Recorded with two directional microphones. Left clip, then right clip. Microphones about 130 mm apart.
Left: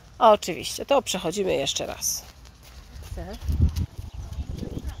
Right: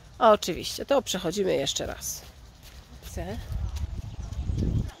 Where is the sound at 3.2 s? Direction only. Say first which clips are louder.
Right 2 dB; 60° right (ahead or behind).